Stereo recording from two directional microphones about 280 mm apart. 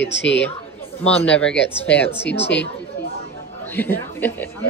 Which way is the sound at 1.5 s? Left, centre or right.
Left.